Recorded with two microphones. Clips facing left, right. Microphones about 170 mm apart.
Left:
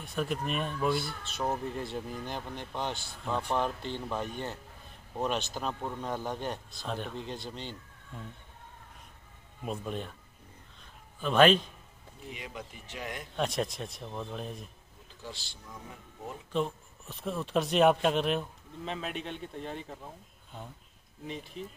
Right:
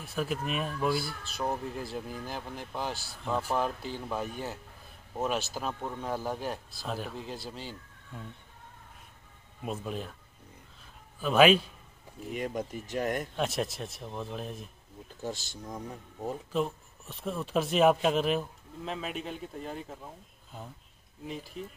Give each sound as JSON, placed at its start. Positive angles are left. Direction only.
{"t": 0.0, "sound": "speech", "side_deg": -5}
{"t": 9.7, "sound": "speech", "side_deg": 0}
{"t": 11.1, "sound": "speech", "side_deg": -5}
{"t": 12.3, "sound": "speech", "side_deg": -50}
{"t": 13.3, "sound": "speech", "side_deg": 0}
{"t": 15.2, "sound": "speech", "side_deg": -45}
{"t": 16.5, "sound": "speech", "side_deg": 0}
{"t": 21.2, "sound": "speech", "side_deg": 0}